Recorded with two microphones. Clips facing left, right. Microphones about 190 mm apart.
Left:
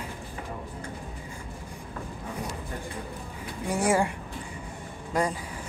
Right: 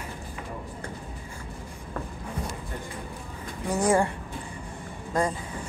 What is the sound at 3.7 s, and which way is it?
Speech, 10° left (ahead or behind).